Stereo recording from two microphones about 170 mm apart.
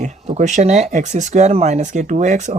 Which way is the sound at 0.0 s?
45° right (ahead or behind).